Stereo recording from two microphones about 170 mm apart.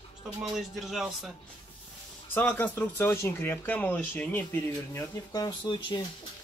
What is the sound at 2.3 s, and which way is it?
Speech, 10° left (ahead or behind).